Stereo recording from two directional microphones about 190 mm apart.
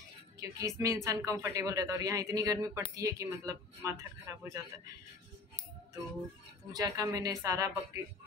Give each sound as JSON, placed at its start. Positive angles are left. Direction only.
{"t": 0.4, "sound": "speech", "side_deg": -15}
{"t": 6.7, "sound": "speech", "side_deg": -20}